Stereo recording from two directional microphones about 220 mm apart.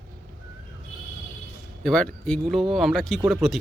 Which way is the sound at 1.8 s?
5° left (ahead or behind).